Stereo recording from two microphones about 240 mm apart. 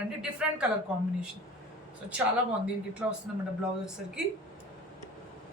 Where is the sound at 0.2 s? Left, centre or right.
Centre.